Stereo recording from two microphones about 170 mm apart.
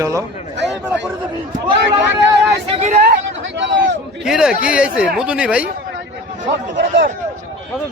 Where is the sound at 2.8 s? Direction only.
45° right (ahead or behind).